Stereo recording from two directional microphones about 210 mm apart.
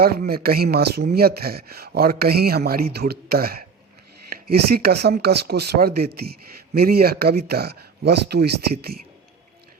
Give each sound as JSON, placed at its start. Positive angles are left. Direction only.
{"t": 0.0, "sound": "speech", "side_deg": -45}